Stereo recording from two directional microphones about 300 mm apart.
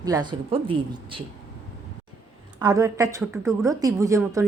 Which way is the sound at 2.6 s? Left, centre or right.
Centre.